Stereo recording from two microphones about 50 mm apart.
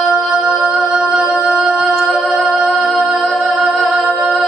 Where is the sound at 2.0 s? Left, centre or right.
Centre.